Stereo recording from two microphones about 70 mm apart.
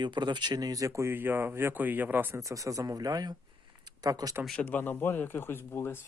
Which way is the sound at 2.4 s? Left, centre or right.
Right.